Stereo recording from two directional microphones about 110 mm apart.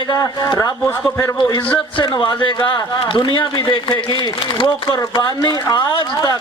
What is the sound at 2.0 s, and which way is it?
A man's voice, 50° left (ahead or behind).